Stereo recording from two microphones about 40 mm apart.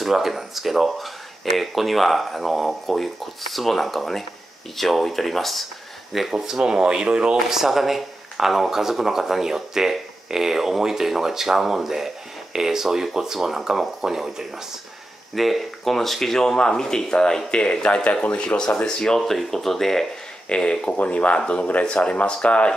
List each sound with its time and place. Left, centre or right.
0.0 s speech: centre
6.3 s speech: centre
7.4 s speech: centre
15.3 s speech: centre
20.4 s speech: left